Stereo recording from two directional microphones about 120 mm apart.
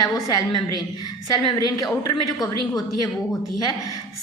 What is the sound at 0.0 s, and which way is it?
A woman's voice, 30° left (ahead or behind).